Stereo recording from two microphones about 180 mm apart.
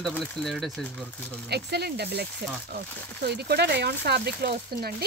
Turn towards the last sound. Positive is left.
turn(degrees=-60)  # may be behind; listen again after turning